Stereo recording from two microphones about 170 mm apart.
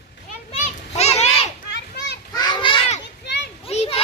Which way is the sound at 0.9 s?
40° left (ahead or behind).